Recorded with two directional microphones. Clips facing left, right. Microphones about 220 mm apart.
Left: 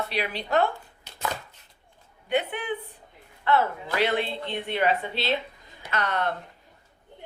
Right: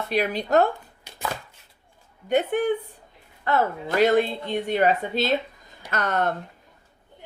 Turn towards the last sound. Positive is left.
turn(degrees=-45)  # may be behind; listen again after turning